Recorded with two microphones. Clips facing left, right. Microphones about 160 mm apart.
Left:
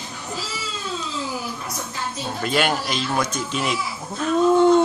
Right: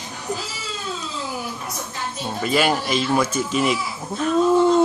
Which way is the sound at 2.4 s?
5° right (ahead or behind).